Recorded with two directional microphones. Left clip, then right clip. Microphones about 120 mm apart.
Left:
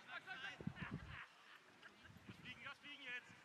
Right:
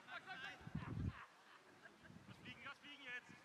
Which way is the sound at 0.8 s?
40° left (ahead or behind).